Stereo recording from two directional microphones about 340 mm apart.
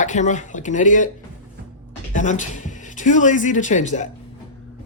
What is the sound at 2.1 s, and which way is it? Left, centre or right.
Speech, left.